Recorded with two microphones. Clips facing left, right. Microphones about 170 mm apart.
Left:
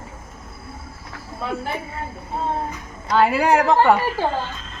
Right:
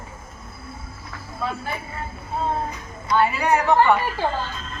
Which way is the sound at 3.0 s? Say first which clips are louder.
Left 3 dB; 75° left (ahead or behind).